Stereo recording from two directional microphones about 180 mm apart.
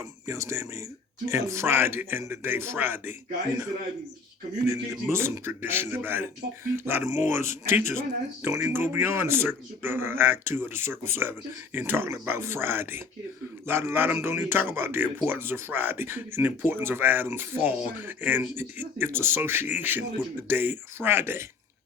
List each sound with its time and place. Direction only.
0.3 s a man's voice: 15° right (ahead or behind)
4.6 s a man's voice: 15° right (ahead or behind)